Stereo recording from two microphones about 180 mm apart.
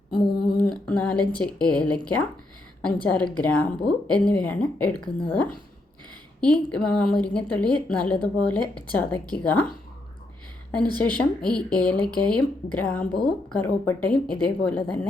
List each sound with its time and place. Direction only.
0.1 s a sound: 25° left (ahead or behind)
0.5 s a woman's voice: 5° left (ahead or behind)
11.2 s a woman's voice: 5° left (ahead or behind)